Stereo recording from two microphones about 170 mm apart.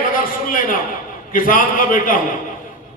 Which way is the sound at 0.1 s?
55° left (ahead or behind).